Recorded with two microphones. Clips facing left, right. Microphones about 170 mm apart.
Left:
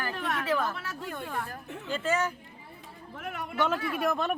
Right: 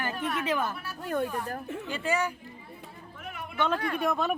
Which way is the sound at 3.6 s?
5° left (ahead or behind).